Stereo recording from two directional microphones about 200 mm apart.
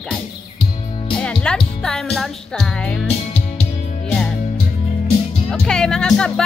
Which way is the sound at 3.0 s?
30° left (ahead or behind).